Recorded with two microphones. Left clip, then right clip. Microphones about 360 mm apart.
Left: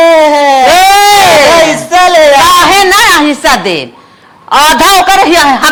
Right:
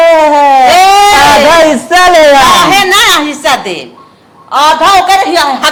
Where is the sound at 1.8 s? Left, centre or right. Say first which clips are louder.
Right 1 dB; right.